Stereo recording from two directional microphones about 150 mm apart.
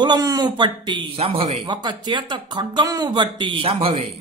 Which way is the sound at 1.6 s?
30° right (ahead or behind).